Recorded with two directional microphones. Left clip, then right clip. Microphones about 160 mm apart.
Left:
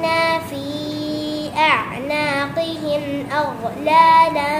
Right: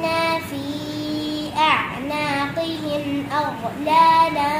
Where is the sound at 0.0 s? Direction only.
20° left (ahead or behind).